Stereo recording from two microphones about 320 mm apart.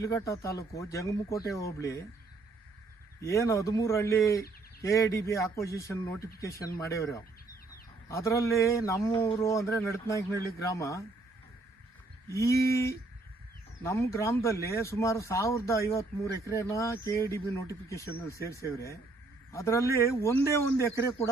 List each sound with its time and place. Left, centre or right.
0.0 s speech: centre
3.2 s speech: centre
12.3 s speech: centre
19.5 s speech: centre